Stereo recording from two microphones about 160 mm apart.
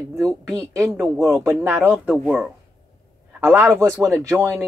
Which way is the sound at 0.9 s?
Centre (ahead or behind).